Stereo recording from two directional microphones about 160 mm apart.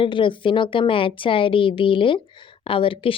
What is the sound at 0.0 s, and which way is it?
Speech, 30° left (ahead or behind).